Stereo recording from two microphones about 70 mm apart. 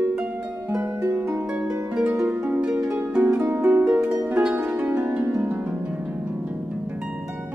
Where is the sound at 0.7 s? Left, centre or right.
Right.